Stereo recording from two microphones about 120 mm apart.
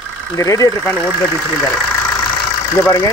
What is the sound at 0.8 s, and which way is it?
Speech, 10° left (ahead or behind).